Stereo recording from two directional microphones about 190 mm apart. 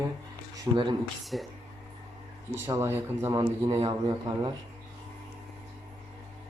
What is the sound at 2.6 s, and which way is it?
Speech, 15° right (ahead or behind).